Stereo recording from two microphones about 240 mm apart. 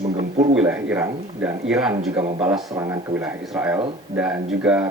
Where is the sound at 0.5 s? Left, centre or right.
Centre.